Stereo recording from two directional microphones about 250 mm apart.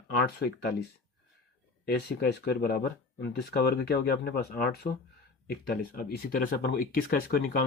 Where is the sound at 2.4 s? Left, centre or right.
Left.